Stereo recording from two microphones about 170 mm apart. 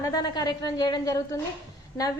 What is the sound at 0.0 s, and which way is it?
A woman's voice, 25° left (ahead or behind).